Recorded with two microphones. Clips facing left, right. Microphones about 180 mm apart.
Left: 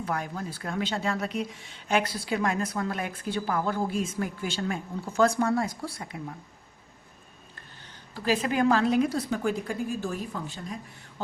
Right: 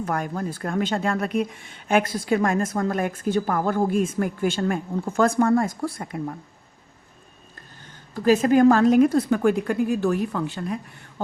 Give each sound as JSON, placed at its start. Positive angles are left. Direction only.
{"t": 0.0, "sound": "speech", "side_deg": -50}
{"t": 8.1, "sound": "a woman's voice", "side_deg": -45}